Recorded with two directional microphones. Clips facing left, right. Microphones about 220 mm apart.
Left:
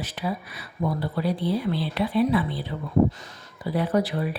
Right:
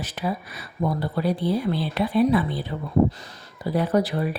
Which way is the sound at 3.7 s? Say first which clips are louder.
Right 2 dB; 40° right (ahead or behind).